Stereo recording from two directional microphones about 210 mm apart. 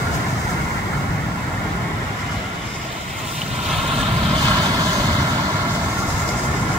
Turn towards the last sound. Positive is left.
turn(degrees=-20)  # may be behind; listen again after turning